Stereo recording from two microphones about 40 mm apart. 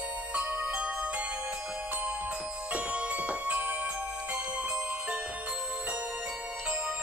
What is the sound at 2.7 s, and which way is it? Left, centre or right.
Music, right.